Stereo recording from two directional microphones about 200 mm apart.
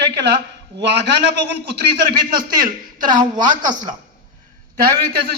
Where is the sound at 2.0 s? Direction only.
50° right (ahead or behind).